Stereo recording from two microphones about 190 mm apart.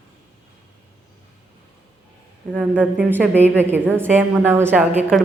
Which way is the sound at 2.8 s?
10° right (ahead or behind).